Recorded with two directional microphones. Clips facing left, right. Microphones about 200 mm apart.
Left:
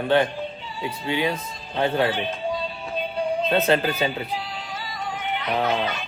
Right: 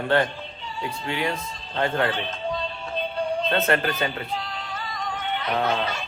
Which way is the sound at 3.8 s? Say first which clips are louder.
Left 2 dB; 5° left (ahead or behind).